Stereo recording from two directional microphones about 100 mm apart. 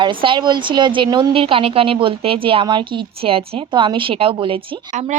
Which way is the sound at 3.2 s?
70° right (ahead or behind).